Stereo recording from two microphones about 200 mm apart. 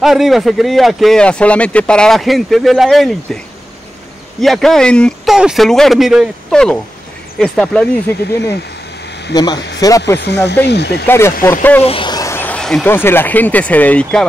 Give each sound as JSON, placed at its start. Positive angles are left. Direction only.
{"t": 0.0, "sound": "speech", "side_deg": 0}
{"t": 4.4, "sound": "speech", "side_deg": 0}
{"t": 9.3, "sound": "speech", "side_deg": 20}
{"t": 10.2, "sound": "speech", "side_deg": 60}
{"t": 11.1, "sound": "speech", "side_deg": 10}
{"t": 11.8, "sound": "speech", "side_deg": 25}